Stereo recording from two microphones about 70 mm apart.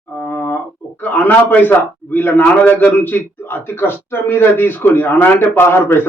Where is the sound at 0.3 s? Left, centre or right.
Left.